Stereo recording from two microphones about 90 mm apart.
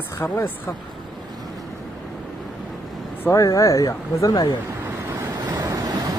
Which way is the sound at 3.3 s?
40° left (ahead or behind).